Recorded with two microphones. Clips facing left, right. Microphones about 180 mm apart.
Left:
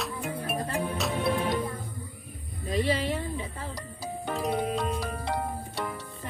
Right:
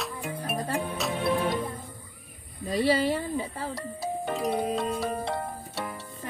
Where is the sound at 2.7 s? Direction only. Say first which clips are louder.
Right 3 dB; 40° right (ahead or behind).